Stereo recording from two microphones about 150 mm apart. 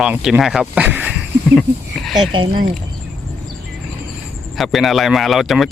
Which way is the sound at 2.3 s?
30° right (ahead or behind).